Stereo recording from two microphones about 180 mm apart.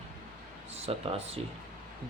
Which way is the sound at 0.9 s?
35° right (ahead or behind).